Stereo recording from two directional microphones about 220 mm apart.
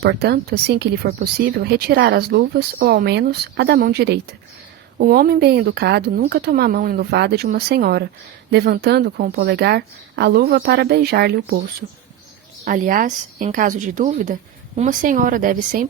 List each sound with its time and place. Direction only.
0.0 s speech: 50° right (ahead or behind)
12.6 s speech: 40° right (ahead or behind)